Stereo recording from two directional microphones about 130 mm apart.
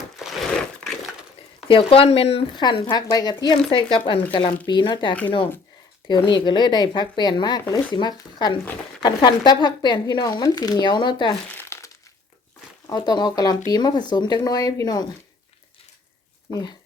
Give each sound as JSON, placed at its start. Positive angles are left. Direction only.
{"t": 0.2, "sound": "a sound", "side_deg": 0}
{"t": 1.6, "sound": "speech", "side_deg": 45}
{"t": 2.6, "sound": "speech", "side_deg": 35}
{"t": 11.5, "sound": "crumpling", "side_deg": 20}
{"t": 12.9, "sound": "speech", "side_deg": 30}
{"t": 16.5, "sound": "speech", "side_deg": 25}